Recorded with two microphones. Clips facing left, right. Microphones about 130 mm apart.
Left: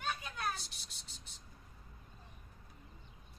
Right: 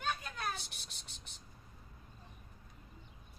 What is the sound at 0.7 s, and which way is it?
Cricket, 65° right (ahead or behind).